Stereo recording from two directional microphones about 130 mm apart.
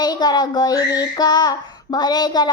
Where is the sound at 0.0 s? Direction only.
30° left (ahead or behind).